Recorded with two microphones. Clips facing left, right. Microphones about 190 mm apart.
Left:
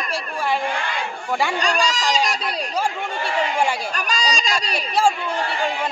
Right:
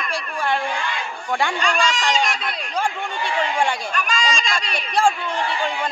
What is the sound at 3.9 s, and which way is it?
Speech, 40° left (ahead or behind).